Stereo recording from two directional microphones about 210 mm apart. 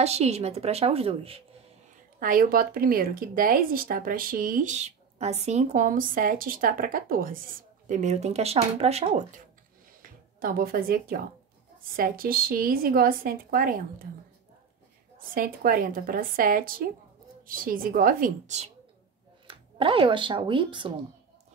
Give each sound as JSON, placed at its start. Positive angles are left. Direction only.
{"t": 0.0, "sound": "a woman's voice", "side_deg": -30}
{"t": 2.1, "sound": "speech", "side_deg": -40}
{"t": 10.4, "sound": "a woman's voice", "side_deg": -45}
{"t": 15.3, "sound": "a woman's voice", "side_deg": -45}
{"t": 19.4, "sound": "speech", "side_deg": -25}